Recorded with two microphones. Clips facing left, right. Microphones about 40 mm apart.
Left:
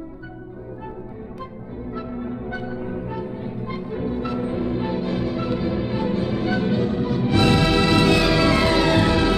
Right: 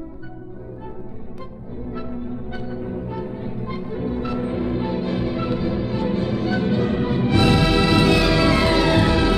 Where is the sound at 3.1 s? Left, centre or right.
Centre.